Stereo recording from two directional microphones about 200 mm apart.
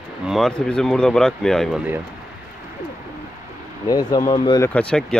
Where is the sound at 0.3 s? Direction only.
Centre (ahead or behind).